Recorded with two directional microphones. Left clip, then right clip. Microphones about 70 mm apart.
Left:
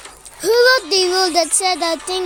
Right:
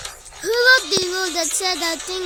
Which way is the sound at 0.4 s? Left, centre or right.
Centre.